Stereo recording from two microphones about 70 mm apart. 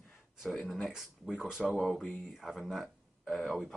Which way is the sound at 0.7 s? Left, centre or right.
Centre.